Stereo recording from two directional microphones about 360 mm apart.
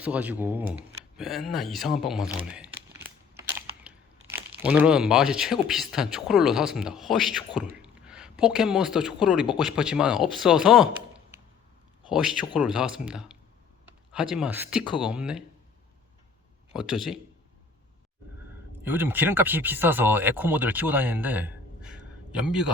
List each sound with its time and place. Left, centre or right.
0.0 s speech: centre
4.3 s speech: centre
7.8 s a sound: centre
9.2 s speech: centre
16.7 s speech: centre
18.8 s speech: centre